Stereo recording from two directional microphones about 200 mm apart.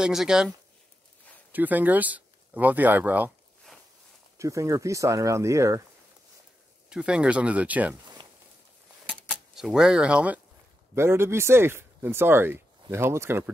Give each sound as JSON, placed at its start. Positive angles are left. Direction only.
{"t": 0.0, "sound": "speech", "side_deg": -5}
{"t": 1.5, "sound": "speech", "side_deg": -10}
{"t": 4.4, "sound": "speech", "side_deg": -15}
{"t": 6.9, "sound": "speech", "side_deg": -5}
{"t": 9.0, "sound": "a sound", "side_deg": -5}
{"t": 9.3, "sound": "speech", "side_deg": 0}